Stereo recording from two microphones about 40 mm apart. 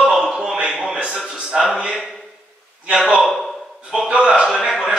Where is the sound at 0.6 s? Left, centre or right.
Right.